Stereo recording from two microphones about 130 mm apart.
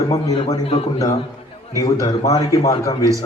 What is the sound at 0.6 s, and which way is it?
Speech, 55° left (ahead or behind).